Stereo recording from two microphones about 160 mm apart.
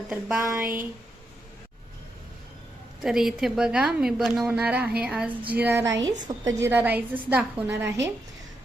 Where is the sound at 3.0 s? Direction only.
Centre (ahead or behind).